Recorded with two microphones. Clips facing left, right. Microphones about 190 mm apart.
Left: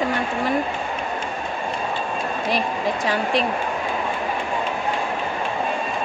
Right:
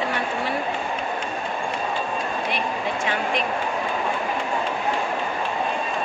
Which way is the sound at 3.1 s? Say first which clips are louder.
Left 4 dB; 35° left (ahead or behind).